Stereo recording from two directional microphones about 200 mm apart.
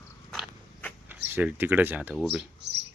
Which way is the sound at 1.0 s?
10° right (ahead or behind).